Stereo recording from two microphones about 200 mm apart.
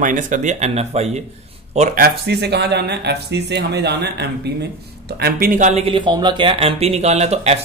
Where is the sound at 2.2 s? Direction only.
55° right (ahead or behind).